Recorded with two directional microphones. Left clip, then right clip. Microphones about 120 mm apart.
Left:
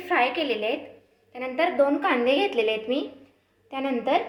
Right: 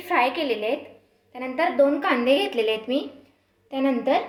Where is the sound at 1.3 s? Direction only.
45° right (ahead or behind).